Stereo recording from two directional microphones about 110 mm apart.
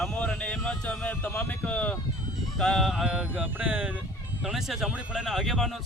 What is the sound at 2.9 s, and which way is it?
Speech, 5° right (ahead or behind).